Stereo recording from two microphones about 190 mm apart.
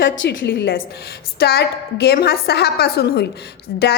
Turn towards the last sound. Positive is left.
turn(degrees=65)  # may be behind; listen again after turning